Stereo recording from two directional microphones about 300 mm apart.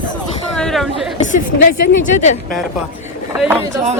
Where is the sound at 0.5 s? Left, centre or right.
Centre.